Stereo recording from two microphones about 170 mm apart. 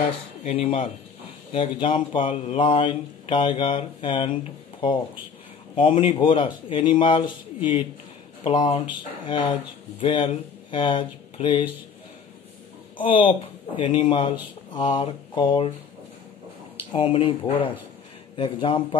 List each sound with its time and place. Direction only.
0.4 s speech: 35° left (ahead or behind)
5.8 s speech: 30° left (ahead or behind)
12.9 s speech: 30° left (ahead or behind)
16.9 s speech: 30° left (ahead or behind)